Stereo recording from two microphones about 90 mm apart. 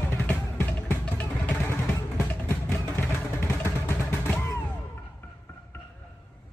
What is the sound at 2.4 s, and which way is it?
Vehicle, 30° left (ahead or behind).